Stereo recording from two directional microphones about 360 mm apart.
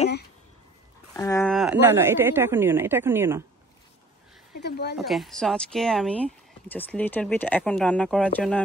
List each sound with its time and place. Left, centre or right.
1.1 s speech: centre
4.6 s a woman's voice: left
4.9 s speech: centre